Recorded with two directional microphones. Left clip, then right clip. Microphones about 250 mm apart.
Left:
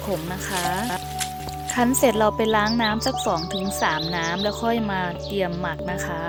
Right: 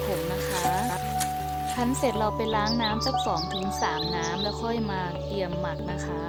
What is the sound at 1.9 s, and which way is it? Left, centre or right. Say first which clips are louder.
Speech: left 8 dB; centre.